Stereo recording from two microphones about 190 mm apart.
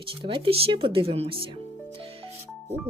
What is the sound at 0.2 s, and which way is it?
Speech, 25° right (ahead or behind).